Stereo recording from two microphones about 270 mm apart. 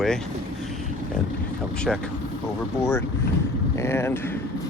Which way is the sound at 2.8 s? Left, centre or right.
Centre.